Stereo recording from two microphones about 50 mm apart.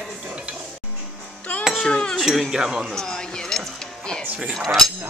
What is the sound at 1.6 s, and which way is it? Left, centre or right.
Cutlery, centre.